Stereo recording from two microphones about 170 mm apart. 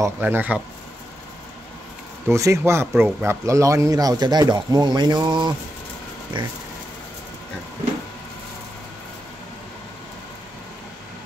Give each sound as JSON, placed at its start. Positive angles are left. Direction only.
{"t": 0.0, "sound": "speech", "side_deg": -10}
{"t": 2.2, "sound": "speech", "side_deg": -15}